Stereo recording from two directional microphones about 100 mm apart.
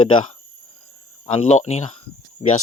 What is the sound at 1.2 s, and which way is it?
Speech, 90° left.